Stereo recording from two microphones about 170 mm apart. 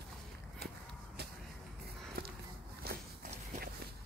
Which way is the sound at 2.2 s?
60° right (ahead or behind).